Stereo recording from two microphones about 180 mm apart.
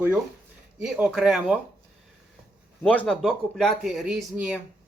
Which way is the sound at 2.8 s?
10° left (ahead or behind).